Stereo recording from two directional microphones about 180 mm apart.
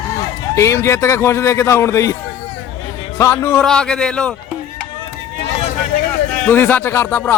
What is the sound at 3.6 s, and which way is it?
Speech, 5° left (ahead or behind).